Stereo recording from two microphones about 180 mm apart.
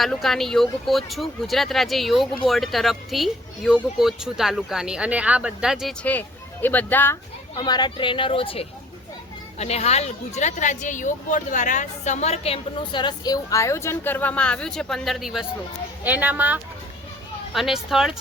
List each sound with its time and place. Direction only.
0.0 s speech: centre (ahead or behind)
6.1 s speech: 10° left (ahead or behind)
7.5 s speech: 25° left (ahead or behind); by 18.1 s centre (ahead or behind)